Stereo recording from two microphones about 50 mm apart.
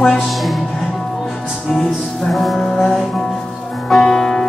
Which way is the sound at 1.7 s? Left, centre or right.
Centre.